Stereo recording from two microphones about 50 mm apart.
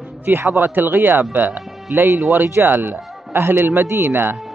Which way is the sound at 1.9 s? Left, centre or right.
Right.